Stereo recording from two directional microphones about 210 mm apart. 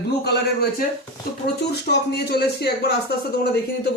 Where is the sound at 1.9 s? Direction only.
50° left (ahead or behind).